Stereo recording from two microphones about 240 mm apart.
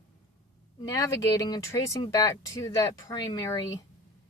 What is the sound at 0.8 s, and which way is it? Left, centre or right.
A woman's voice, centre.